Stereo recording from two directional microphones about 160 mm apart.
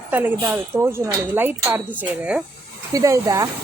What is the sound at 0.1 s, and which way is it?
Speech, 10° right (ahead or behind).